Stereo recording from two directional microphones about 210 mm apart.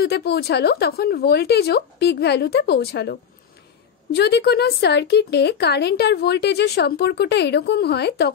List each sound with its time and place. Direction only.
0.0 s speech: 50° left (ahead or behind)